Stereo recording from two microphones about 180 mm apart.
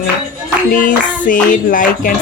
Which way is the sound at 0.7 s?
45° left (ahead or behind).